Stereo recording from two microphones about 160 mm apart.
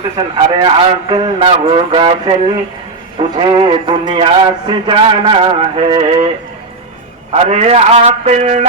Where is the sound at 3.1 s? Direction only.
30° right (ahead or behind).